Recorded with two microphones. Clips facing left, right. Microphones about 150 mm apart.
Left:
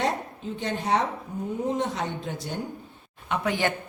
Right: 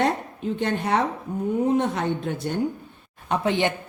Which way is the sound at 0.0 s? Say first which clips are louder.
Right 4 dB; 60° right (ahead or behind).